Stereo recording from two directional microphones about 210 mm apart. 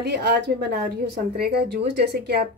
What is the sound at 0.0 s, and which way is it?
Speech, 55° right (ahead or behind).